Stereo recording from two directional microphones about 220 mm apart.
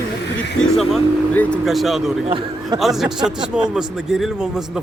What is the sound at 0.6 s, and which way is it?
Speech, centre (ahead or behind).